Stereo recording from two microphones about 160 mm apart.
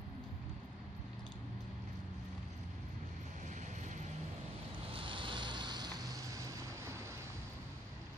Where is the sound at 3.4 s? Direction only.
50° right (ahead or behind).